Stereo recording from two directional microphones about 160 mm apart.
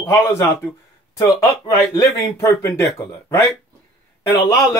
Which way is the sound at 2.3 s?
15° left (ahead or behind).